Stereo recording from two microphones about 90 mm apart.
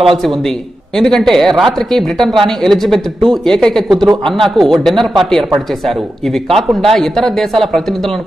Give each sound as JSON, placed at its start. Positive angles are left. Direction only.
{"t": 0.9, "sound": "speech", "side_deg": 5}